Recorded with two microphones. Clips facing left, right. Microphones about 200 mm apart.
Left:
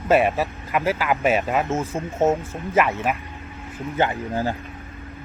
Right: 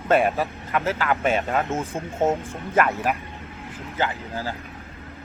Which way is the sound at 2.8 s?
Centre (ahead or behind).